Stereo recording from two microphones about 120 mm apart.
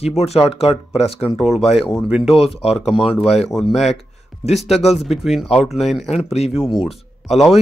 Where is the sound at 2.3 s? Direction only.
55° left (ahead or behind).